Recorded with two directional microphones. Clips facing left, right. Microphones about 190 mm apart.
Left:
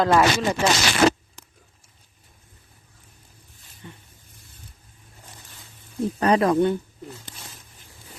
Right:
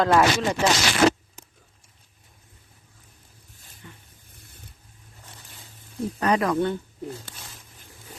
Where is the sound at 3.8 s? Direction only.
25° left (ahead or behind).